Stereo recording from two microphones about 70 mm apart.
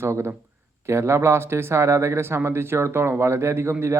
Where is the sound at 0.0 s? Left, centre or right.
Right.